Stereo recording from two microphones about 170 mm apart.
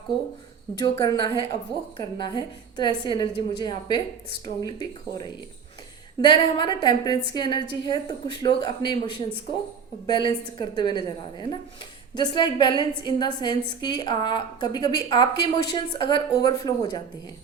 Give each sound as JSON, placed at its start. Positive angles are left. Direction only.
{"t": 0.8, "sound": "a woman's voice", "side_deg": 25}
{"t": 6.2, "sound": "a woman's voice", "side_deg": 25}